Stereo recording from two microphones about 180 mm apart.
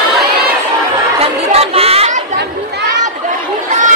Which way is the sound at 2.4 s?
65° right (ahead or behind).